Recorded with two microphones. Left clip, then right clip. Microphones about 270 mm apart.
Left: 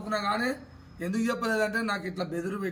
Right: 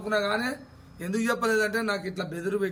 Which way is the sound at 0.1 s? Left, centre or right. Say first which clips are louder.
Right 2 dB; centre.